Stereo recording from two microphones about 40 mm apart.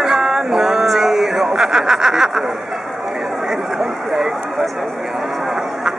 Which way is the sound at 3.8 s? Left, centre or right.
Centre.